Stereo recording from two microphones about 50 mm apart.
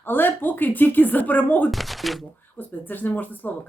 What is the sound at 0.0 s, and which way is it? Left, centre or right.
A woman's voice, left.